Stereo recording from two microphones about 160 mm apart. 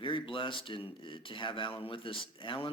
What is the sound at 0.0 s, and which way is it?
Speech, 30° left (ahead or behind).